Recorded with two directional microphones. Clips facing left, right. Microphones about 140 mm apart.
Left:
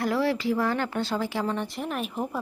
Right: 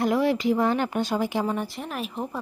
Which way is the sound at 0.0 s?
20° right (ahead or behind).